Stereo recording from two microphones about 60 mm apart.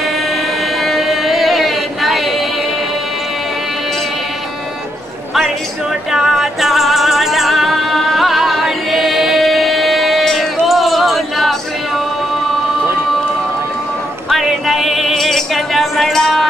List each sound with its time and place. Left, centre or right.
0.8 s music: centre
6.1 s music: centre
14.3 s a sound: centre